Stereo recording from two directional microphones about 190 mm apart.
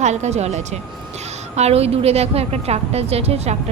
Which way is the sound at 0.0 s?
35° right (ahead or behind).